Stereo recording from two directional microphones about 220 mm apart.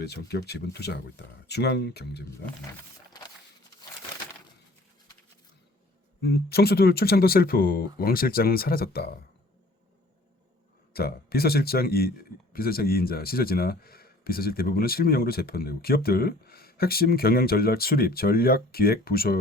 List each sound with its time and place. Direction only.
0.0 s speech: 50° left (ahead or behind)
6.2 s speech: 45° left (ahead or behind)
10.9 s speech: 45° left (ahead or behind)